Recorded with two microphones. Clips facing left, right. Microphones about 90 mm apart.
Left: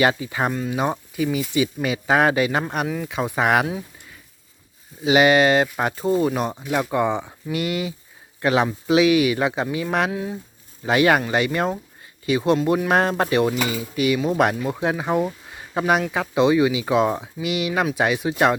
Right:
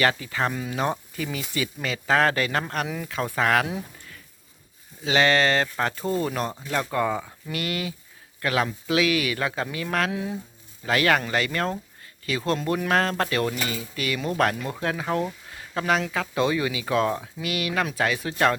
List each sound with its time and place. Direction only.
0.0 s speech: 20° left (ahead or behind)
0.5 s speech: centre (ahead or behind)
0.8 s speech: 10° left (ahead or behind)
2.8 s speech: centre (ahead or behind)
3.1 s speech: 15° left (ahead or behind)
5.0 s a man's voice: 15° left (ahead or behind)
10.1 s speech: centre (ahead or behind)
10.8 s a man's voice: 20° left (ahead or behind)